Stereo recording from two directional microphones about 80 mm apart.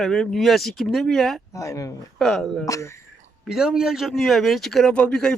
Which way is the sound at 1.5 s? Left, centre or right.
Left.